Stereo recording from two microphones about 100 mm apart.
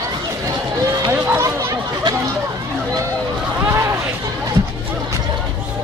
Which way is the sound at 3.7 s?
25° right (ahead or behind).